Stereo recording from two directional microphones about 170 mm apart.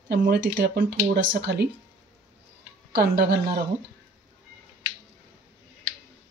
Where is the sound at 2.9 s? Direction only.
70° right (ahead or behind).